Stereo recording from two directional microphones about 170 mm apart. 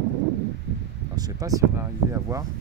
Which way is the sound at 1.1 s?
20° right (ahead or behind).